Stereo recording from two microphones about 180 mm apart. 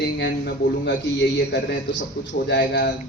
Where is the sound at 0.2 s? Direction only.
70° left (ahead or behind).